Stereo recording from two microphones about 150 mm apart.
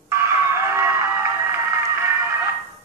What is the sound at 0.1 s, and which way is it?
Music, 20° right (ahead or behind).